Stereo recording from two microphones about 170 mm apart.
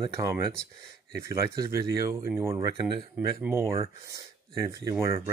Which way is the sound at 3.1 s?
10° right (ahead or behind).